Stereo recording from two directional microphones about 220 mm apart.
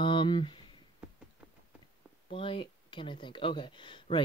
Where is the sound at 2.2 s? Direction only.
25° left (ahead or behind).